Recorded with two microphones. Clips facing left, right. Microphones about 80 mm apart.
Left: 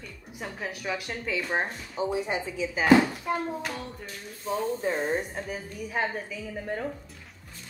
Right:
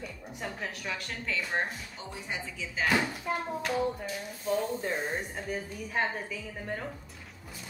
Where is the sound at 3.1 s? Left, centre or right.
Centre.